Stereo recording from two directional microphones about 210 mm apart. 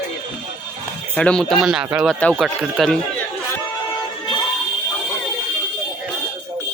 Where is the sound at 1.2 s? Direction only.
5° left (ahead or behind).